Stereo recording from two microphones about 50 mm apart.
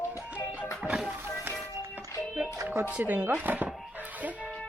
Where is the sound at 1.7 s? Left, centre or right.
Right.